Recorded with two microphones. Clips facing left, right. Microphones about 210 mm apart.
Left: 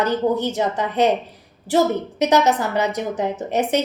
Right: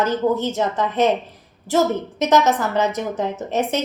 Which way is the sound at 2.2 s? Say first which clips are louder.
Even; 15° left (ahead or behind).